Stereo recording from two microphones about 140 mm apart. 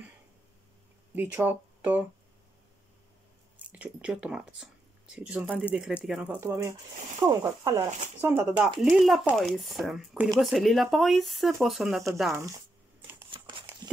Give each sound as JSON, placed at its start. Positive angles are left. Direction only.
{"t": 1.1, "sound": "speech", "side_deg": -15}
{"t": 3.5, "sound": "speech", "side_deg": -10}
{"t": 6.4, "sound": "speech", "side_deg": -20}
{"t": 8.5, "sound": "speech", "side_deg": 0}
{"t": 13.3, "sound": "a sound", "side_deg": -35}